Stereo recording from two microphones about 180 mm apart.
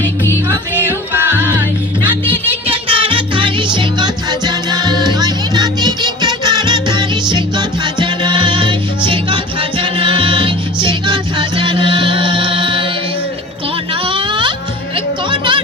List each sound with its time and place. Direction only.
2.6 s music: 30° right (ahead or behind)
14.0 s music: 30° right (ahead or behind)